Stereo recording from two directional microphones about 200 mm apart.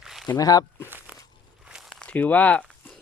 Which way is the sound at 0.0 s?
Centre (ahead or behind).